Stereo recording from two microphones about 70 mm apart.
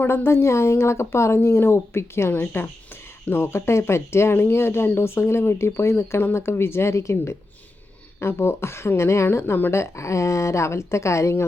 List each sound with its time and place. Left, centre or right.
0.0 s speech: left